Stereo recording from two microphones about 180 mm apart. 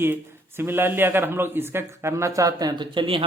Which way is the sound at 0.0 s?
10° right (ahead or behind).